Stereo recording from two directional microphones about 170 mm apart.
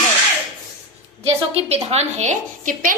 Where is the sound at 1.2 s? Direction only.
40° right (ahead or behind).